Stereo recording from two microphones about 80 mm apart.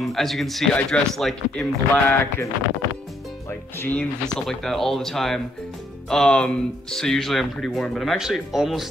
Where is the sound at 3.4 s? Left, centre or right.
Left.